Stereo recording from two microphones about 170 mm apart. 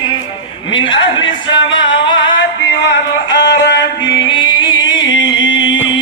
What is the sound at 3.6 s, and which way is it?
Music, 85° left.